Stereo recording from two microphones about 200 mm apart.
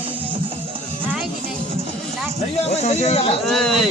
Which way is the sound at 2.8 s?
35° left (ahead or behind).